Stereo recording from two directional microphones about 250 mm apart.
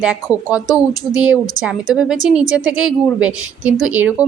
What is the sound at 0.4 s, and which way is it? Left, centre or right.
Speech, centre.